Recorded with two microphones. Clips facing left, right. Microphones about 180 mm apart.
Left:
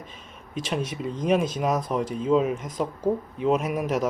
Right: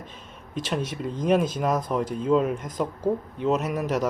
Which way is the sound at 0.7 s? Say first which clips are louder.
Even; 5° left (ahead or behind).